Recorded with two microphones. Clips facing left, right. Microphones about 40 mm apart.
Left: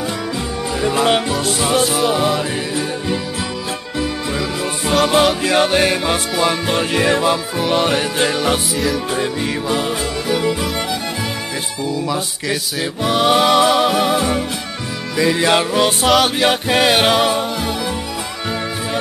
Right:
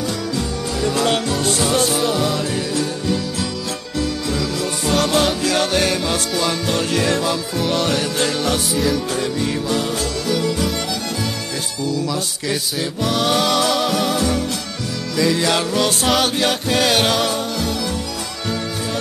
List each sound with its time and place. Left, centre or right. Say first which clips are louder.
0.7 s music: left 3 dB; left
11.8 s music: left 1 dB; left